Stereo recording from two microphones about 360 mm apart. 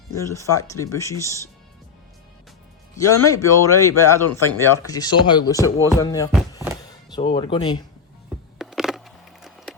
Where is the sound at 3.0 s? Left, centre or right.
Left.